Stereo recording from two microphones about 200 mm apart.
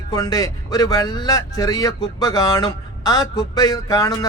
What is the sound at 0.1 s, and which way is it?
Speech, 15° left (ahead or behind).